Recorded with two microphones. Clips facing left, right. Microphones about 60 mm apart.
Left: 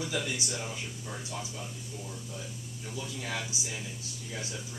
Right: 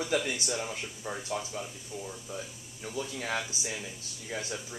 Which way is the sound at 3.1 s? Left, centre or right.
Right.